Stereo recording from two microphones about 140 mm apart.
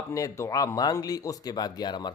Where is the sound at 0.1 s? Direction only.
20° left (ahead or behind).